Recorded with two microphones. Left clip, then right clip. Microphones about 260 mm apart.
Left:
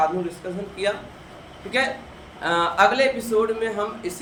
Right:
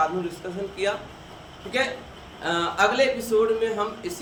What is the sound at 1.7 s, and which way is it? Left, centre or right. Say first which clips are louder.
A man's voice: left 3 dB; centre.